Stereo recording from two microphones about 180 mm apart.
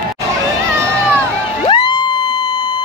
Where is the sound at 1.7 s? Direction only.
25° left (ahead or behind).